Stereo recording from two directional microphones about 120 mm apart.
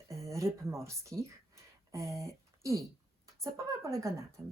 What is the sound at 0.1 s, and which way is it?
Speech, 25° right (ahead or behind).